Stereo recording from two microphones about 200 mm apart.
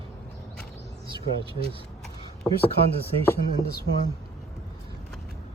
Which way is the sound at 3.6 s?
50° left (ahead or behind).